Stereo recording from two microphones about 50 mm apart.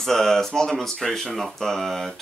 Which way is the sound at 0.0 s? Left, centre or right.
Centre.